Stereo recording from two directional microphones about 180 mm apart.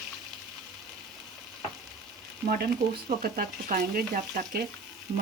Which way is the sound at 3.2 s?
55° right (ahead or behind).